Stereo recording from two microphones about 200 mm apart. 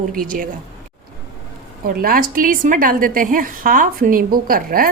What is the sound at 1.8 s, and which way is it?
A woman's voice, 45° right (ahead or behind).